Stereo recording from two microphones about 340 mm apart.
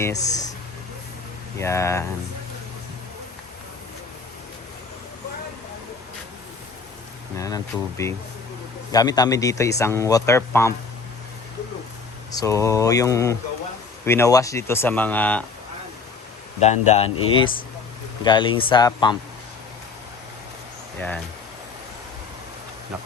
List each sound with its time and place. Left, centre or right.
0.0 s speech: centre
1.5 s a man's voice: centre
7.3 s a man's voice: centre
12.3 s a man's voice: centre
16.6 s a man's voice: centre